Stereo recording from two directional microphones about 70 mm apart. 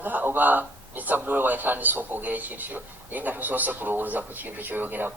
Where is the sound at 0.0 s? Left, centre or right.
Right.